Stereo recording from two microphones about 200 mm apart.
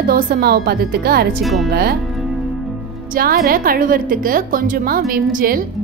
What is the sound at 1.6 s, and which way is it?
Speech, 50° right (ahead or behind).